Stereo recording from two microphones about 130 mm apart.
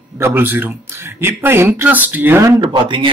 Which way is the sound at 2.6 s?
35° right (ahead or behind).